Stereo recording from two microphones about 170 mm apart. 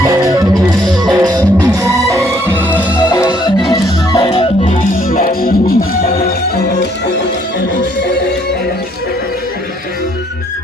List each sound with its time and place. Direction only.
0.0 s music: 20° right (ahead or behind)
0.8 s music: centre (ahead or behind)
1.1 s music: 20° right (ahead or behind)
3.1 s music: 20° left (ahead or behind)
4.7 s music: 55° left (ahead or behind); by 7.3 s 80° left